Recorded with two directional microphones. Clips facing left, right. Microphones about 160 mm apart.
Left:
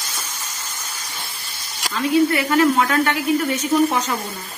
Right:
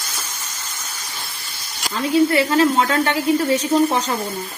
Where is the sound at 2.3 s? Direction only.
30° right (ahead or behind).